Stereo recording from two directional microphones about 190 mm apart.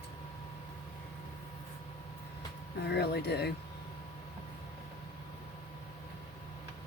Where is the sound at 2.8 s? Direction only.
60° left (ahead or behind).